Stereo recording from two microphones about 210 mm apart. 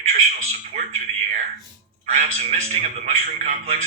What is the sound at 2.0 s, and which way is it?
A man's voice, 35° right (ahead or behind).